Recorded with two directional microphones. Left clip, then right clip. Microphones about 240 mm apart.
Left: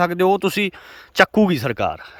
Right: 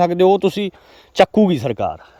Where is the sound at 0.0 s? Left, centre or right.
Centre.